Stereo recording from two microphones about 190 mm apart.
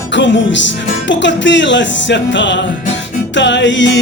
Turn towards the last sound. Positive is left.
turn(degrees=70)  # may be behind; listen again after turning